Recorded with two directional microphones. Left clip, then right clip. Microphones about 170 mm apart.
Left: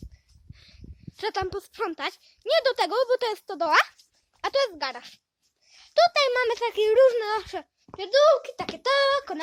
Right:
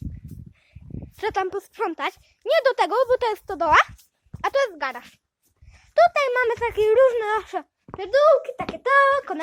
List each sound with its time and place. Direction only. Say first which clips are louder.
0.6 s dog: right 6 dB; 20° left (ahead or behind)
1.2 s speech: right 4 dB; 5° left (ahead or behind)
3.7 s speech: right 4 dB; 10° left (ahead or behind)
5.8 s a sound: right 3 dB; 20° left (ahead or behind)
6.1 s speech: right 2 dB; 20° left (ahead or behind)
8.4 s a child's voice: right 5 dB; 25° left (ahead or behind)
9.1 s speech: right 3 dB; 15° left (ahead or behind)